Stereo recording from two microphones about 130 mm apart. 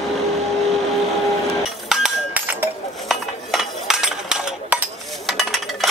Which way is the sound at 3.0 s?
Centre (ahead or behind).